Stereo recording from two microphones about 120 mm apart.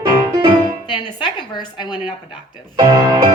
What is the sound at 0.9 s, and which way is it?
A woman's voice, 40° left (ahead or behind).